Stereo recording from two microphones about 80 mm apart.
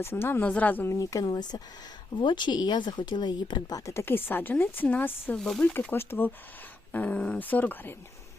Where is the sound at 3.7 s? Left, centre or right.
Left.